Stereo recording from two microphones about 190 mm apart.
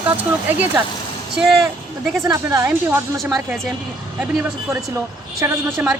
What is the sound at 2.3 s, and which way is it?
A woman's voice, 15° right (ahead or behind).